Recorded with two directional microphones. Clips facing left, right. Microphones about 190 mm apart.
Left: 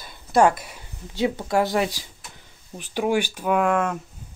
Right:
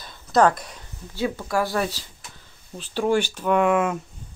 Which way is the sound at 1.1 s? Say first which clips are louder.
Left 2 dB; 20° left (ahead or behind).